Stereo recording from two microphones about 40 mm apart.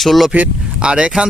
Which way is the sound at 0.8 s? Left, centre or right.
Right.